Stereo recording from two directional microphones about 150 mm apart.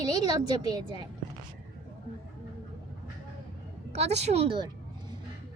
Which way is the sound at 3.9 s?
45° right (ahead or behind).